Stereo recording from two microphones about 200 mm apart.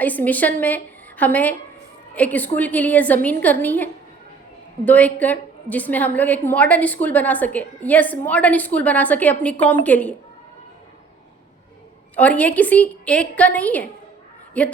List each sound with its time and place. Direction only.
0.0 s a woman's voice: 10° left (ahead or behind)
4.9 s a woman's voice: 5° left (ahead or behind)
12.1 s a woman's voice: 5° left (ahead or behind)